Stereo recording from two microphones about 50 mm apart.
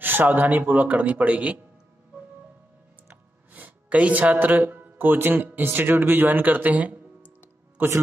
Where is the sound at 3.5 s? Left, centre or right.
Right.